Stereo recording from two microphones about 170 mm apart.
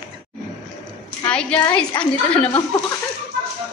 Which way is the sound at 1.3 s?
5° left (ahead or behind).